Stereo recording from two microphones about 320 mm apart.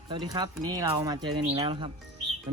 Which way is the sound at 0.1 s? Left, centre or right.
Centre.